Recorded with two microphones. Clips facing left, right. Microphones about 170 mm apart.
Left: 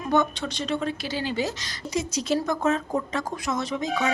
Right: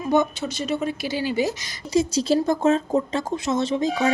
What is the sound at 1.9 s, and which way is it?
Speech, 30° right (ahead or behind).